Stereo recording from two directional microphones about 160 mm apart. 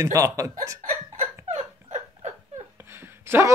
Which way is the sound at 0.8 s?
50° right (ahead or behind).